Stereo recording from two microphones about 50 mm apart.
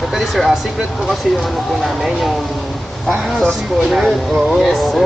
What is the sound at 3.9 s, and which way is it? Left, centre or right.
Speech, centre.